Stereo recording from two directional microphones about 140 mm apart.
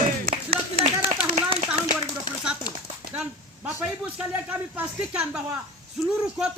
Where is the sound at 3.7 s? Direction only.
10° right (ahead or behind).